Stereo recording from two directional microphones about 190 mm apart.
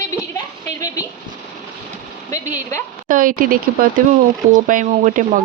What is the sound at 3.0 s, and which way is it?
Speech, 45° right (ahead or behind).